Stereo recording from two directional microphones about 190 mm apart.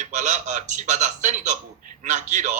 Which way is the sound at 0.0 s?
40° right (ahead or behind).